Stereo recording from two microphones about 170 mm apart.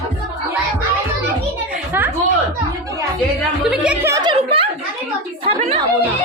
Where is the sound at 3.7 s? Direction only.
5° right (ahead or behind).